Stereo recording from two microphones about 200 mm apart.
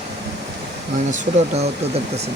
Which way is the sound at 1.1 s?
30° right (ahead or behind).